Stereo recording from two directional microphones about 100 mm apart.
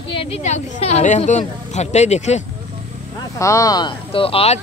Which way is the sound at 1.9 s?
90° left.